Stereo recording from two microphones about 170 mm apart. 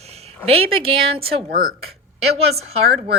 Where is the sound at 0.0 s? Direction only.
40° right (ahead or behind).